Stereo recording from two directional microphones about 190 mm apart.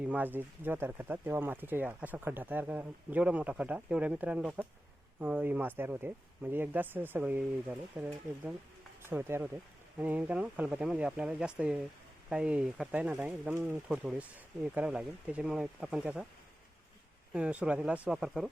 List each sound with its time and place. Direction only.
0.0 s speech: 10° right (ahead or behind)
17.3 s speech: 5° right (ahead or behind)